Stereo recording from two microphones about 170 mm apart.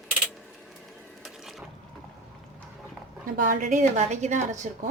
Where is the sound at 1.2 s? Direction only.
Centre (ahead or behind).